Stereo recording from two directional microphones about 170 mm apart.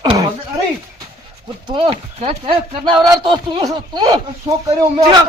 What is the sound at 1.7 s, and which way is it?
Speech, 30° right (ahead or behind).